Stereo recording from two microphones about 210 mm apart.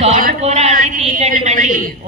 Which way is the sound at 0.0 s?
30° right (ahead or behind).